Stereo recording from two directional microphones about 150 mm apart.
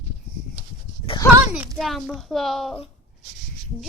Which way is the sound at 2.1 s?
Centre (ahead or behind).